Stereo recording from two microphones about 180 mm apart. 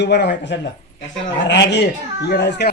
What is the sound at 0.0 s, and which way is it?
Speech, 70° left (ahead or behind).